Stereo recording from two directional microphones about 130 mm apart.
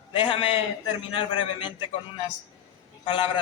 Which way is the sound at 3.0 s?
45° left (ahead or behind).